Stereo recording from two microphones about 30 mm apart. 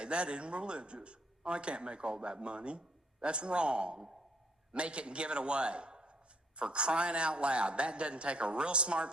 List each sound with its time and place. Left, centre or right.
0.0 s a man's voice: right